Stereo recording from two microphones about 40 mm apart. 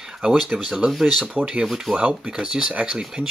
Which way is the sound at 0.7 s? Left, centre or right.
Centre.